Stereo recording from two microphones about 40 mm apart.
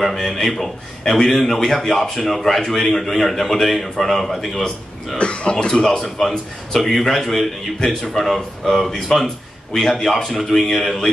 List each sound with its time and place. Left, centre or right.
0.0 s a man's voice: centre
5.1 s speech: left
6.1 s a man's voice: centre